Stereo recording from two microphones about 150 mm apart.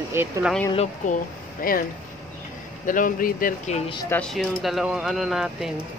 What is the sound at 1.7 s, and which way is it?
Speech, 70° left (ahead or behind).